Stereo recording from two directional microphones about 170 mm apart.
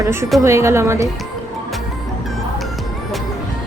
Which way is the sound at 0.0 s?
15° right (ahead or behind).